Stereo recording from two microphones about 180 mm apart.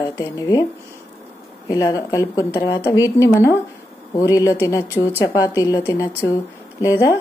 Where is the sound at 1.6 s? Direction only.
20° left (ahead or behind).